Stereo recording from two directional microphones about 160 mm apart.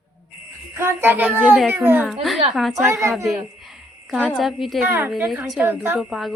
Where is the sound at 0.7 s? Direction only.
15° right (ahead or behind).